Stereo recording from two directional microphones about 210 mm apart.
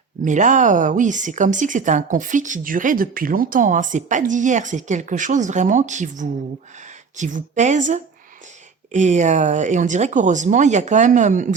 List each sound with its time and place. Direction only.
0.3 s speech: 35° right (ahead or behind)